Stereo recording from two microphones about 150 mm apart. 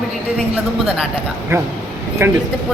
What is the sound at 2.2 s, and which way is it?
Speech, 15° right (ahead or behind).